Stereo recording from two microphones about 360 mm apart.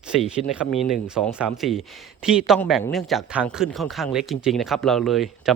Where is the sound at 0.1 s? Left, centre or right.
Centre.